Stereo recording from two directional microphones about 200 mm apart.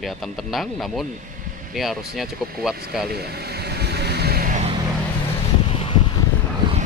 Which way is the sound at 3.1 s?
50° right (ahead or behind).